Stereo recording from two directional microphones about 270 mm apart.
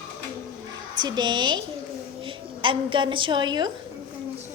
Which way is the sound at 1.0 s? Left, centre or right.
Centre.